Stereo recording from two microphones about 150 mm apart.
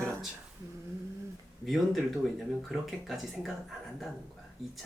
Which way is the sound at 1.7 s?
Centre (ahead or behind).